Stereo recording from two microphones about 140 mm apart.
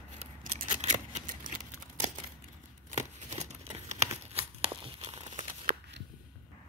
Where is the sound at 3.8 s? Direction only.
50° right (ahead or behind).